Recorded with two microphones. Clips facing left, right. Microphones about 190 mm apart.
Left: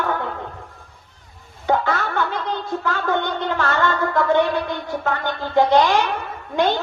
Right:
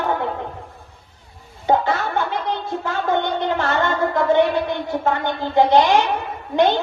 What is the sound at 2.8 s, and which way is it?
Speech, 20° right (ahead or behind).